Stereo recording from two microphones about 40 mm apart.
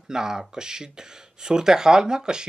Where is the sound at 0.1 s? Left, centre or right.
Centre.